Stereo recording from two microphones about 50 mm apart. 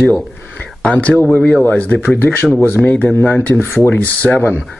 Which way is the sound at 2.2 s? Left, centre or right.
Left.